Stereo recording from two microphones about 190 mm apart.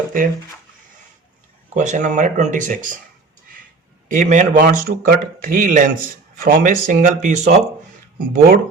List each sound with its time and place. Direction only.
1.7 s speech: 40° right (ahead or behind)
4.1 s a man's voice: 40° right (ahead or behind)